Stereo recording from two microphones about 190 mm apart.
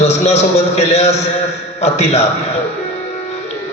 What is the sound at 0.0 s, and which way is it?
A man's voice, 35° left (ahead or behind).